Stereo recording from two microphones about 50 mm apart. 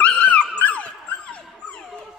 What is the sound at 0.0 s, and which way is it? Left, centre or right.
Dog, left.